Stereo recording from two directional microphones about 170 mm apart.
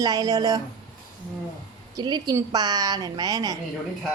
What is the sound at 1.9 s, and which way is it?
A woman's voice, 25° right (ahead or behind).